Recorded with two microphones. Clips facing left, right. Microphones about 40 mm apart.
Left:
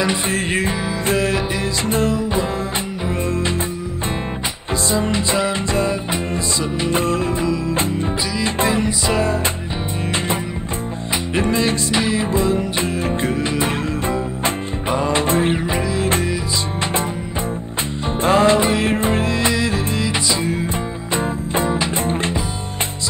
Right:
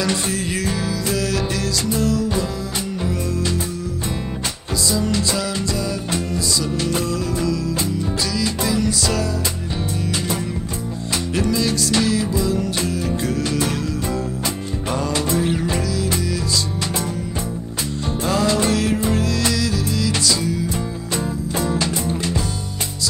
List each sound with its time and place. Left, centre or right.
0.3 s music: left
4.9 s music: left
11.3 s music: left
15.6 s music: left
18.2 s music: left